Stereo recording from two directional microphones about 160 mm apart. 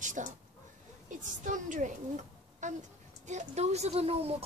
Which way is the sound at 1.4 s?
50° right (ahead or behind).